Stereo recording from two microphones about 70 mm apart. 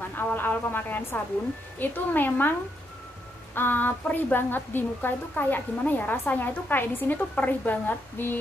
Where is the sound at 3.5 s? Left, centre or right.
Left.